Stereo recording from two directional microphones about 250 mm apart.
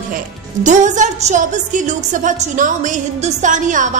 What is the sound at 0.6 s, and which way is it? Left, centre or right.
A woman's voice, right.